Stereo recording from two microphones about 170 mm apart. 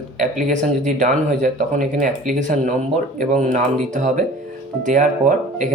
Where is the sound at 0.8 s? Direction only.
45° right (ahead or behind).